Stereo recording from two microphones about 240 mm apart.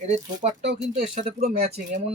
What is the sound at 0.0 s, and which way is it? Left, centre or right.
Speech, right.